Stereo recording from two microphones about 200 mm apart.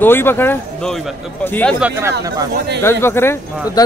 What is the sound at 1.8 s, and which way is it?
Speech, 15° right (ahead or behind).